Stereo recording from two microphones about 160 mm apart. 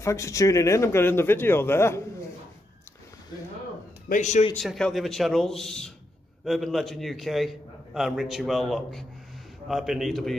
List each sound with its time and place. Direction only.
0.0 s speech: 20° left (ahead or behind)
4.1 s a man's voice: 50° left (ahead or behind)
4.6 s a man's voice: 5° left (ahead or behind)